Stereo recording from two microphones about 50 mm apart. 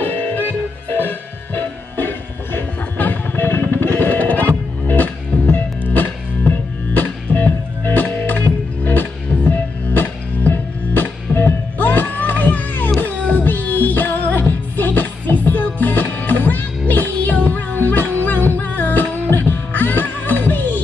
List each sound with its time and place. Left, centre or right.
0.0 s music: left